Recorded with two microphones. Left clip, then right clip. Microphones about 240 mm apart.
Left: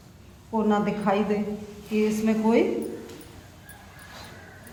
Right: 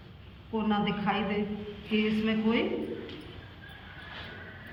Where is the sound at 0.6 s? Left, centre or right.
Left.